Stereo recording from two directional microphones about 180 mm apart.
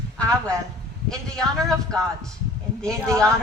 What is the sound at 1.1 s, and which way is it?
Speech, centre (ahead or behind).